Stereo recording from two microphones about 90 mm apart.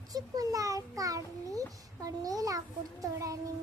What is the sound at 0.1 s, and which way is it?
A child's voice, 40° right (ahead or behind).